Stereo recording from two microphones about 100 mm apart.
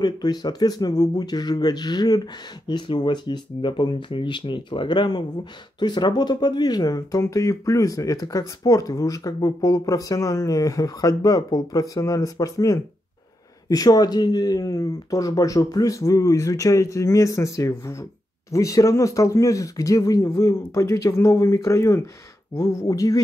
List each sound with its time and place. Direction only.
0.0 s speech: 45° left (ahead or behind)